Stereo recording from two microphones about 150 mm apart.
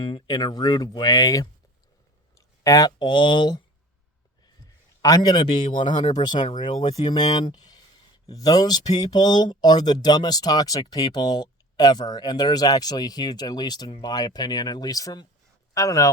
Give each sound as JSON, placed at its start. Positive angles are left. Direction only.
{"t": 0.0, "sound": "speech", "side_deg": 30}
{"t": 2.6, "sound": "speech", "side_deg": 25}
{"t": 5.0, "sound": "speech", "side_deg": 25}
{"t": 5.7, "sound": "speech", "side_deg": 55}
{"t": 7.1, "sound": "speech", "side_deg": 30}